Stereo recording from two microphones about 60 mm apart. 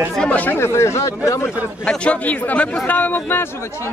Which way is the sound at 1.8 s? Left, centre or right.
Left.